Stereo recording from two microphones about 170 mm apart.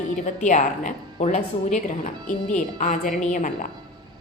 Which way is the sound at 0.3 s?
45° left (ahead or behind).